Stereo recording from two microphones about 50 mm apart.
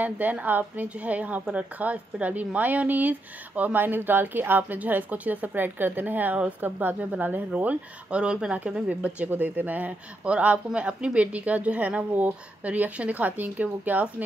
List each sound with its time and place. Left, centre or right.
0.0 s speech: right
7.5 s speech: right
9.3 s speech: right